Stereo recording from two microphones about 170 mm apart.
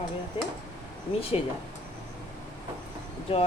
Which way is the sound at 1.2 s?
35° left (ahead or behind).